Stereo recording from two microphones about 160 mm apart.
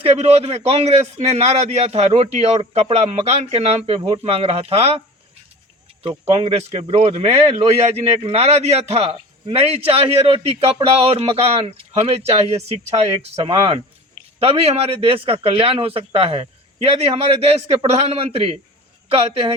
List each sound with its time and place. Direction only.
0.0 s a man's voice: 40° right (ahead or behind)
6.0 s a man's voice: 35° right (ahead or behind)
13.4 s speech: 25° right (ahead or behind)
14.3 s a man's voice: 35° right (ahead or behind)